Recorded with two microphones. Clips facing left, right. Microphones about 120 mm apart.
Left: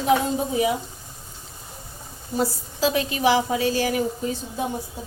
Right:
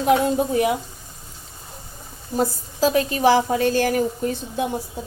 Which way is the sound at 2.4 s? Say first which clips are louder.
Right 3 dB; 45° right (ahead or behind).